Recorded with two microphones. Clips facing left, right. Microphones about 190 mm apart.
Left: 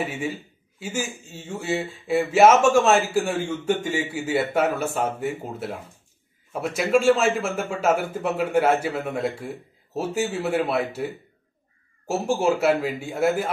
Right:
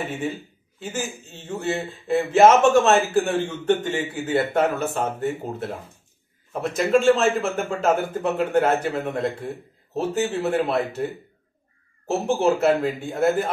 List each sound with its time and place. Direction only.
0.7 s speech: 10° left (ahead or behind)
12.4 s speech: 5° left (ahead or behind)